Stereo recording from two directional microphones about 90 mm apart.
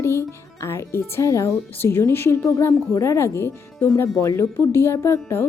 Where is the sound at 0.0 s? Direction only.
30° left (ahead or behind).